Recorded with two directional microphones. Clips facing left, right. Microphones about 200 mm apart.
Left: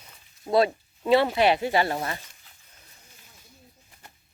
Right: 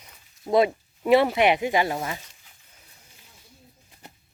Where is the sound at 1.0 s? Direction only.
20° right (ahead or behind).